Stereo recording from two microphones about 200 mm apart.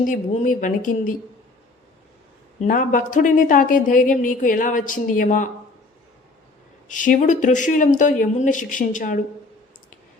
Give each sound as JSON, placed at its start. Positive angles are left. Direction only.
{"t": 0.1, "sound": "a woman's voice", "side_deg": 40}
{"t": 2.6, "sound": "a woman's voice", "side_deg": 45}
{"t": 6.8, "sound": "a woman's voice", "side_deg": 40}